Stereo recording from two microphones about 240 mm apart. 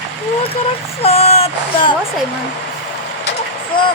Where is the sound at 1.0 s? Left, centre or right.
Left.